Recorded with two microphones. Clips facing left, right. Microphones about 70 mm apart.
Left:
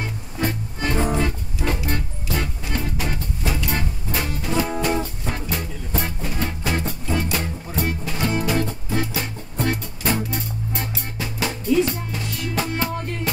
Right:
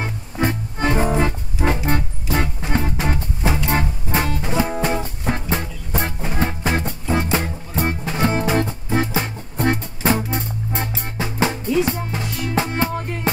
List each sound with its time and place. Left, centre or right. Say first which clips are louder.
0.0 s music: right 3 dB; right